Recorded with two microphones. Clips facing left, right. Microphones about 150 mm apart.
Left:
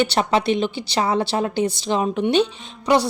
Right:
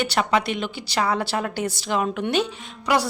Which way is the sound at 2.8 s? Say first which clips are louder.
Left 4 dB; 25° left (ahead or behind).